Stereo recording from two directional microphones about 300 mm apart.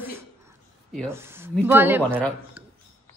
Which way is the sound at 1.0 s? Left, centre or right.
Centre.